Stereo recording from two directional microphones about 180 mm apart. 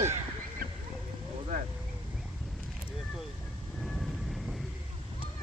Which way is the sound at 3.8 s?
Centre (ahead or behind).